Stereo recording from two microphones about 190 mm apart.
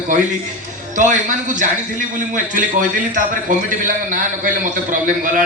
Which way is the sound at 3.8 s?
45° right (ahead or behind).